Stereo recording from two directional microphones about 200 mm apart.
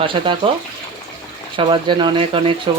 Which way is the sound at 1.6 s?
25° right (ahead or behind).